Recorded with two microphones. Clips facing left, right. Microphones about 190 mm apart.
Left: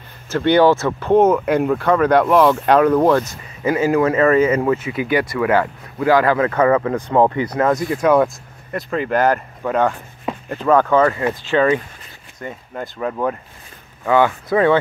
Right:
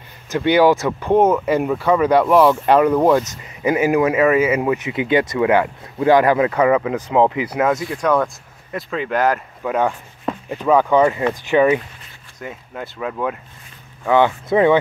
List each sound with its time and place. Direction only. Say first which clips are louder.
0.3 s speech: left 1 dB; 10° right (ahead or behind)
7.9 s speech: left 4 dB; 5° left (ahead or behind); by 11.8 s 15° right (ahead or behind)
12.4 s speech: left 2 dB; 5° right (ahead or behind)
14.1 s speech: even; 20° right (ahead or behind)